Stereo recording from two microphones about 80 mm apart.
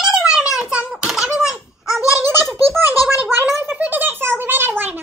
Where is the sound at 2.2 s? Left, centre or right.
Right.